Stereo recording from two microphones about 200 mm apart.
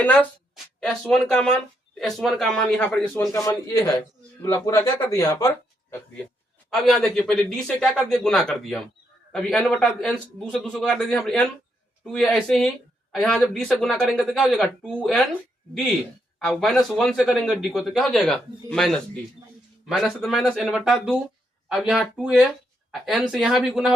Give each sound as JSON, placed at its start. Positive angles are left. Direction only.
{"t": 0.0, "sound": "speech", "side_deg": 10}
{"t": 6.7, "sound": "speech", "side_deg": 0}
{"t": 16.4, "sound": "speech", "side_deg": 5}